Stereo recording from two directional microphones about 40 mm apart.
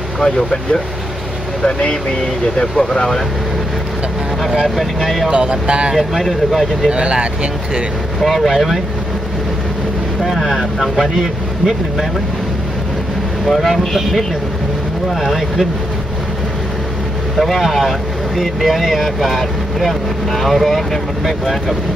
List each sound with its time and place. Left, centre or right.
0.2 s speech: left
4.6 s speech: centre
5.3 s speech: right
5.9 s speech: centre
6.9 s speech: right
8.2 s speech: centre
10.2 s speech: centre
13.5 s speech: centre
15.1 s speech: centre
17.4 s speech: centre